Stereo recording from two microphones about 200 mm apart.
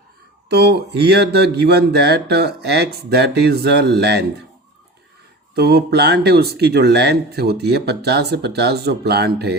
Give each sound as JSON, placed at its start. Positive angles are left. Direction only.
{"t": 0.4, "sound": "speech", "side_deg": -55}
{"t": 5.5, "sound": "speech", "side_deg": -55}